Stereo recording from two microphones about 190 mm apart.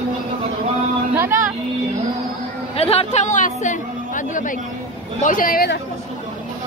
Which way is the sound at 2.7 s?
30° left (ahead or behind).